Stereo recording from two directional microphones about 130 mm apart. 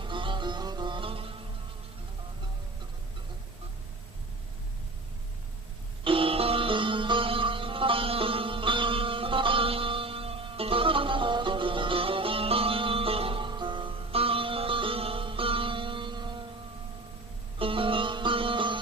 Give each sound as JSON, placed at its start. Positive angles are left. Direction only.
{"t": 0.0, "sound": "music", "side_deg": -40}
{"t": 6.0, "sound": "music", "side_deg": -45}
{"t": 17.6, "sound": "music", "side_deg": -45}